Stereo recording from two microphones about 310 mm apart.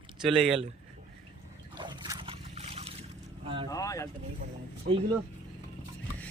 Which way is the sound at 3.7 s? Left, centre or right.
Centre.